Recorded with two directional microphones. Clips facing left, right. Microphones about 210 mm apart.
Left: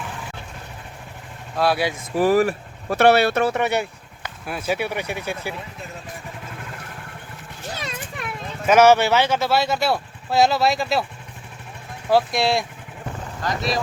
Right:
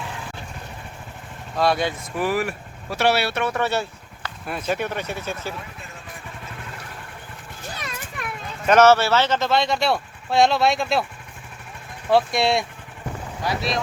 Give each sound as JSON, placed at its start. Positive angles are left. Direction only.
{"t": 1.5, "sound": "speech", "side_deg": 5}
{"t": 2.1, "sound": "speech", "side_deg": 40}
{"t": 3.0, "sound": "speech", "side_deg": 55}
{"t": 3.5, "sound": "speech", "side_deg": 15}
{"t": 4.4, "sound": "speech", "side_deg": 5}
{"t": 8.6, "sound": "speech", "side_deg": 10}
{"t": 12.0, "sound": "speech", "side_deg": 0}